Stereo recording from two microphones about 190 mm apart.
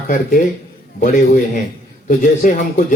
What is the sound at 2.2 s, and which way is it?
Speech, 45° left (ahead or behind).